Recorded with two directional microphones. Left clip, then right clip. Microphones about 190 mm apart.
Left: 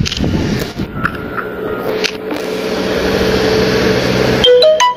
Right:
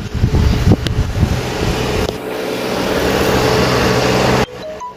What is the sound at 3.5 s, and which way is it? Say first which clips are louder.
Vehicle: left 1 dB; 50° left (ahead or behind).